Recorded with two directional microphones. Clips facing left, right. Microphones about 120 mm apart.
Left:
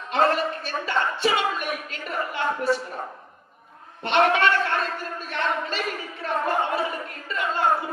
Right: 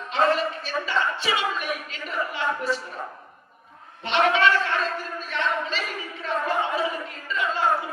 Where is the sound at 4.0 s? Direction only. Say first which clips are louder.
Left 1 dB; 50° left (ahead or behind).